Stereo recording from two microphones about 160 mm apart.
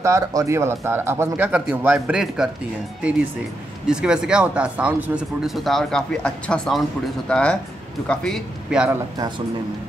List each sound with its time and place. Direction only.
0.0 s speech: 20° right (ahead or behind)